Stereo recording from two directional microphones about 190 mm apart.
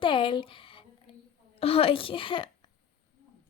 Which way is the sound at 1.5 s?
30° left (ahead or behind).